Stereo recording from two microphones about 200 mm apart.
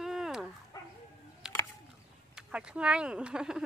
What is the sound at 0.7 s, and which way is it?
Bow-wow, 15° left (ahead or behind).